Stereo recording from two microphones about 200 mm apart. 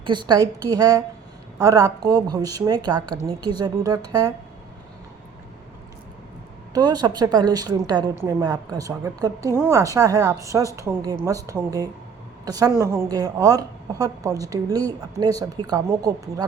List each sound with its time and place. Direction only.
0.0 s a woman's voice: 25° right (ahead or behind)
6.7 s a woman's voice: 20° right (ahead or behind)